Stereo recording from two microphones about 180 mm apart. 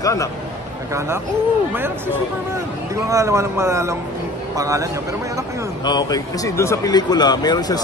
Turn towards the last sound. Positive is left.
turn(degrees=20)  # may be behind; listen again after turning